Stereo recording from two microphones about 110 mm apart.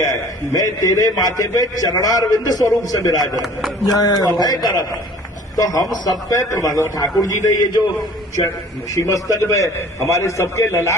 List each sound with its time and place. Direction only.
0.0 s a man's voice: 30° left (ahead or behind)
9.0 s a man's voice: 30° left (ahead or behind)